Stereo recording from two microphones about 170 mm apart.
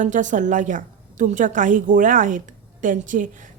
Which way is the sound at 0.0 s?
45° right (ahead or behind).